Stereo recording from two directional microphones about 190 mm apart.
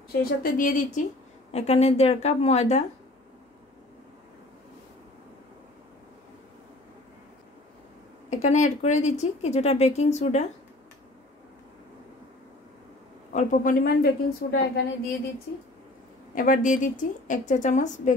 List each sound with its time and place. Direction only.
0.2 s a woman's voice: 45° left (ahead or behind)
1.5 s a woman's voice: 35° left (ahead or behind)
8.3 s a woman's voice: 40° left (ahead or behind)
13.3 s a woman's voice: 40° left (ahead or behind)
16.3 s a woman's voice: 45° left (ahead or behind)